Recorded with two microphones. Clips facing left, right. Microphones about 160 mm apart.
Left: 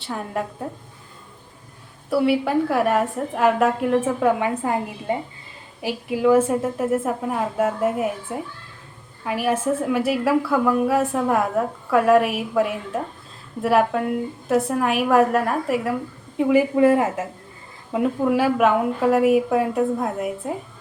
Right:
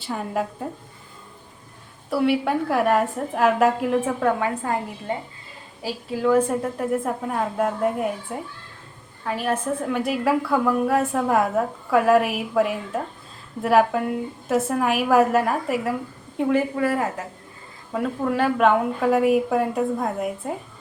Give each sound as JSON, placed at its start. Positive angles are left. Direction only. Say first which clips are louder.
{"t": 0.0, "sound": "a woman's voice", "louder": "right 1 dB", "side_deg": 0}
{"t": 2.0, "sound": "a woman's voice", "louder": "left 1 dB", "side_deg": 0}
{"t": 4.4, "sound": "a woman's voice", "louder": "left 2 dB", "side_deg": 15}
{"t": 16.7, "sound": "a woman's voice", "louder": "left 6 dB", "side_deg": 20}
{"t": 18.3, "sound": "a woman's voice", "louder": "right 2 dB", "side_deg": 5}